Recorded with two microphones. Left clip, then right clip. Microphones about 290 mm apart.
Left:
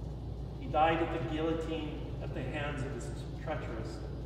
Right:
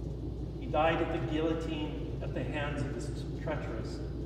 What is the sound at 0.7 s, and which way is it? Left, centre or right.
A man's voice, centre.